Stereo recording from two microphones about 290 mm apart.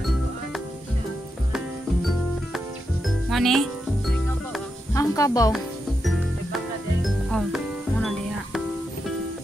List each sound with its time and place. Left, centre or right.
3.3 s speech: centre
4.9 s music: centre
6.0 s music: centre